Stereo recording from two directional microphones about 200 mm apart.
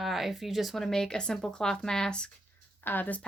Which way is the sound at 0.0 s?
Centre (ahead or behind).